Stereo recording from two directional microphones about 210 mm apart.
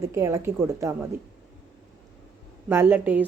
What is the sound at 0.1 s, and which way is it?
Speech, 15° right (ahead or behind).